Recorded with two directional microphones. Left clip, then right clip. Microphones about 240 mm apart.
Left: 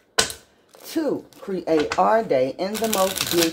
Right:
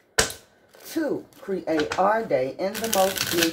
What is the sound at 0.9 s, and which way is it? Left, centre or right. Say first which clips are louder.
Speech: left 2 dB; left.